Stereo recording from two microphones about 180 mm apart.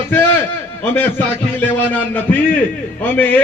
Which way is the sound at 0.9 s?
10° left (ahead or behind).